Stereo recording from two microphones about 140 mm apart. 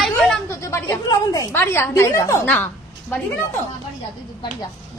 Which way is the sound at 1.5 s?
20° left (ahead or behind).